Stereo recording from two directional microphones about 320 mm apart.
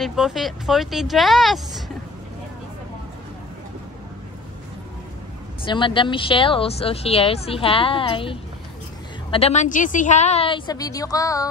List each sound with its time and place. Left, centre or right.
0.0 s speech: centre
5.6 s speech: centre